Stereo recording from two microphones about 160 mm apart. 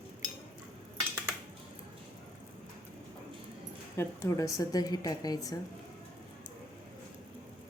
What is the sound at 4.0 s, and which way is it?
A woman's voice, 20° left (ahead or behind).